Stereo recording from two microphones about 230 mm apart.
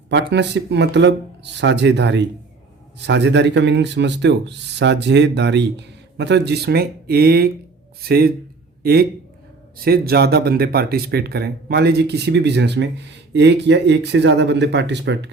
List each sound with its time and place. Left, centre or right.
0.1 s a man's voice: right